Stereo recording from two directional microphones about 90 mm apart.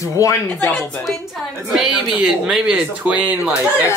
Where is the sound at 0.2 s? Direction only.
35° left (ahead or behind).